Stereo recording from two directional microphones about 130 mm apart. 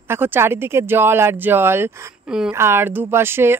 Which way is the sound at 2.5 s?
20° right (ahead or behind).